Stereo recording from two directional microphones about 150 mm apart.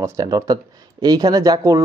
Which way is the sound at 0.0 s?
20° right (ahead or behind).